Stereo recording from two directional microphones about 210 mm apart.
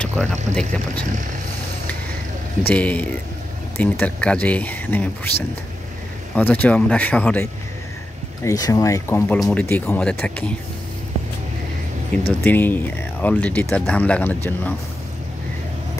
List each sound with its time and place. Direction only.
0.2 s speech: 5° left (ahead or behind)
2.6 s speech: 5° left (ahead or behind)
6.3 s speech: 10° left (ahead or behind)
8.5 s speech: 15° left (ahead or behind)
12.4 s speech: 10° left (ahead or behind)